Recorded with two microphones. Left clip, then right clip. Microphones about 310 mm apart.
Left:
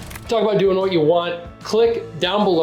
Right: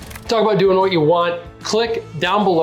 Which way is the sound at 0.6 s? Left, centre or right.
Centre.